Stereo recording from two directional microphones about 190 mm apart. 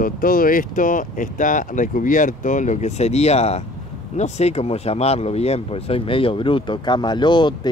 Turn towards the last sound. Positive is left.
turn(degrees=25)  # may be behind; listen again after turning